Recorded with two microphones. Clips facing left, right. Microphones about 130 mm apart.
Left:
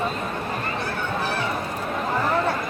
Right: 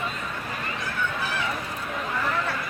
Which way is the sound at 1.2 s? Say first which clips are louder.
Left 4 dB; 40° left (ahead or behind).